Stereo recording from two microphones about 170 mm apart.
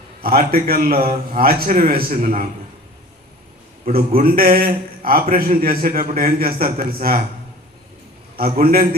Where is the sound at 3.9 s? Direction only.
60° right (ahead or behind).